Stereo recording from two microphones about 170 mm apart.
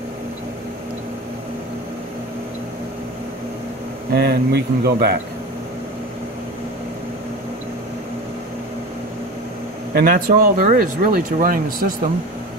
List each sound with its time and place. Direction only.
4.1 s speech: 70° right (ahead or behind)
9.9 s speech: 55° right (ahead or behind)